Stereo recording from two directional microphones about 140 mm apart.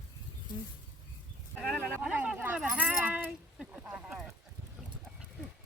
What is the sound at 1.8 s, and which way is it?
Keys jangling, 10° right (ahead or behind).